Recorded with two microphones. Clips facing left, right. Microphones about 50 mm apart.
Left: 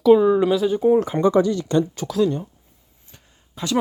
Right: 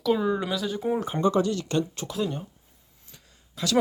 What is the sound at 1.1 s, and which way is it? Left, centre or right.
Speech, left.